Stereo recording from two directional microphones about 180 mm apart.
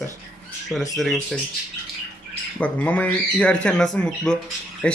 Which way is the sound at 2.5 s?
10° left (ahead or behind).